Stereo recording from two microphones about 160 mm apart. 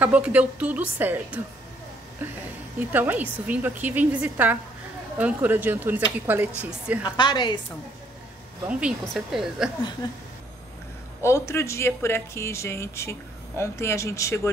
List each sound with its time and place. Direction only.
0.0 s a woman's voice: 10° right (ahead or behind)
2.9 s a woman's voice: 10° right (ahead or behind)
7.0 s a woman's voice: 30° left (ahead or behind)
8.6 s a woman's voice: 5° right (ahead or behind)
10.0 s a woman's voice: 30° left (ahead or behind)
11.2 s speech: 15° left (ahead or behind)